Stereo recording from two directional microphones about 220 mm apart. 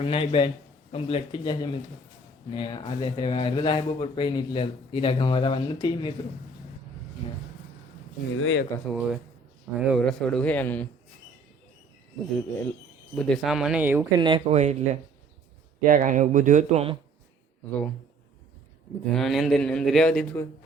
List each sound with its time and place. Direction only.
0.0 s speech: 25° left (ahead or behind)
7.2 s speech: 25° left (ahead or behind)
8.4 s speech: 60° left (ahead or behind)
8.9 s speech: centre (ahead or behind)
13.1 s speech: centre (ahead or behind)
14.2 s speech: 20° right (ahead or behind)
19.1 s speech: centre (ahead or behind)